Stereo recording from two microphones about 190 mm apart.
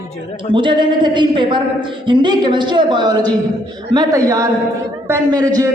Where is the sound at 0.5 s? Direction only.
25° right (ahead or behind).